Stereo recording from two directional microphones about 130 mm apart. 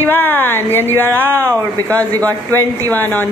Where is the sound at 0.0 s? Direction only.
15° left (ahead or behind).